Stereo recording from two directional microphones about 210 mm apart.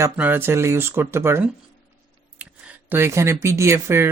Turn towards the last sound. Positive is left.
turn(degrees=-10)  # may be behind; listen again after turning